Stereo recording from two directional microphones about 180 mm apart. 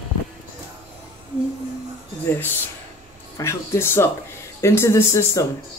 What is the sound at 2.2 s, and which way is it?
Speech, 10° left (ahead or behind).